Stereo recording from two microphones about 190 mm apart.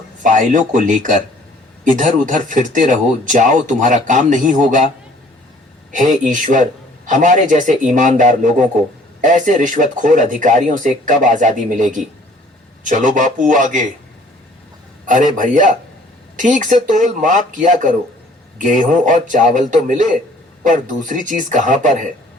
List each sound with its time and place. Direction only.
0.2 s speech: 40° right (ahead or behind)
5.9 s speech: 45° right (ahead or behind)
15.0 s speech: 40° right (ahead or behind)